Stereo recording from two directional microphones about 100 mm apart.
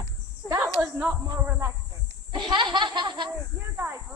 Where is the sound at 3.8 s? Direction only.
20° right (ahead or behind).